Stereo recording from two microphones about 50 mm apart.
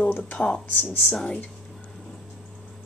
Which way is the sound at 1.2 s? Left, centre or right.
Left.